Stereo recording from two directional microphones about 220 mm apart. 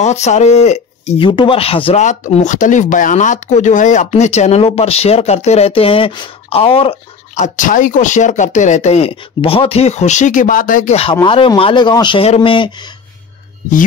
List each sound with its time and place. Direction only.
0.0 s speech: 30° left (ahead or behind)